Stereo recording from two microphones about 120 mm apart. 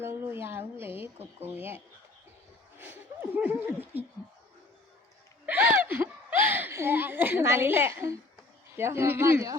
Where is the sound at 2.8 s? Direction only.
15° right (ahead or behind).